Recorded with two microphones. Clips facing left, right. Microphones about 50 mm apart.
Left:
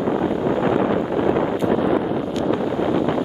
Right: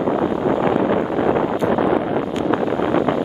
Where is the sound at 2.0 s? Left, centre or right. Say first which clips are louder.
Right 2 dB; right.